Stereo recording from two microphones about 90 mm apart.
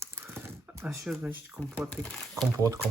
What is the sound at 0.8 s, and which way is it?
Speech, 5° right (ahead or behind).